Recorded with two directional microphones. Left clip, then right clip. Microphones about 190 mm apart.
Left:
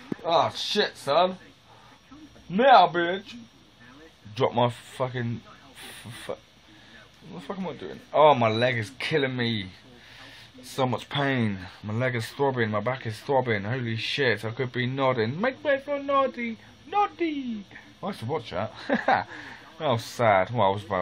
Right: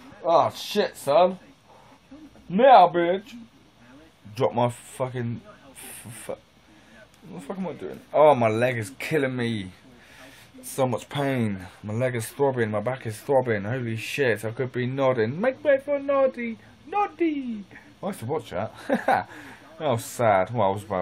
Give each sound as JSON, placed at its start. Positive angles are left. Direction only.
{"t": 0.3, "sound": "speech", "side_deg": -20}
{"t": 2.5, "sound": "speech", "side_deg": -20}
{"t": 4.4, "sound": "speech", "side_deg": 0}